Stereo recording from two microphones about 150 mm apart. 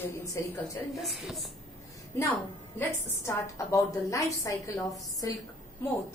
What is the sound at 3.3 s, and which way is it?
A woman's voice, 20° left (ahead or behind).